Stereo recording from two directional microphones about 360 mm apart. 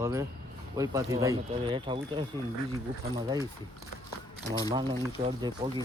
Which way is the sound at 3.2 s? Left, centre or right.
Centre.